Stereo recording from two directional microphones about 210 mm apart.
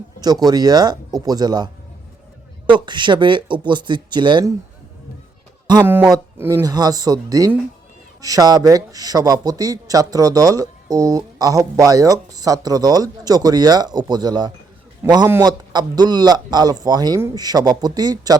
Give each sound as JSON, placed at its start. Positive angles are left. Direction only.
{"t": 0.2, "sound": "a man's voice", "side_deg": -20}
{"t": 2.7, "sound": "a man's voice", "side_deg": -20}
{"t": 5.8, "sound": "a man's voice", "side_deg": -10}